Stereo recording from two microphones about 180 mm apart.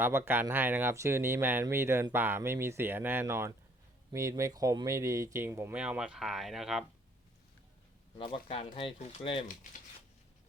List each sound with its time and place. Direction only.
0.0 s speech: 10° right (ahead or behind)
8.2 s speech: 30° left (ahead or behind)